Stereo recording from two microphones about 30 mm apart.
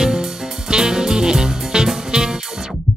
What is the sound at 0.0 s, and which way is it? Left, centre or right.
Music, centre.